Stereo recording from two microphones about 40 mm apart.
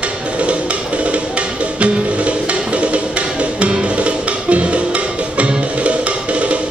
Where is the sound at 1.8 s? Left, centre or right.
Right.